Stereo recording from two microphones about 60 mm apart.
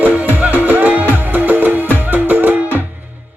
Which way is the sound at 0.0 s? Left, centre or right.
Right.